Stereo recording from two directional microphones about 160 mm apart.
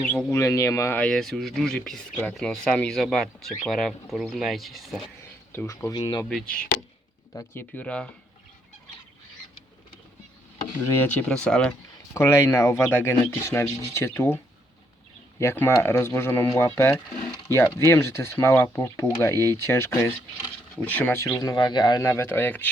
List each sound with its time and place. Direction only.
0.1 s speech: 10° left (ahead or behind)
5.5 s speech: 15° left (ahead or behind)
5.9 s speech: 25° left (ahead or behind)
7.3 s speech: 10° left (ahead or behind)
10.9 s speech: 10° left (ahead or behind)
12.1 s speech: 20° left (ahead or behind)